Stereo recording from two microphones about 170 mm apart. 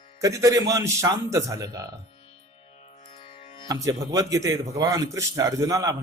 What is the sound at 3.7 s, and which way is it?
A man's voice, 20° right (ahead or behind).